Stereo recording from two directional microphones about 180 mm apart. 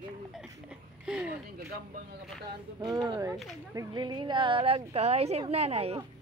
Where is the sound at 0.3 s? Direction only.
5° right (ahead or behind).